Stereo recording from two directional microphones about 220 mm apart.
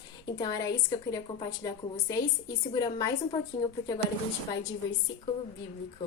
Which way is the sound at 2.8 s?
20° left (ahead or behind).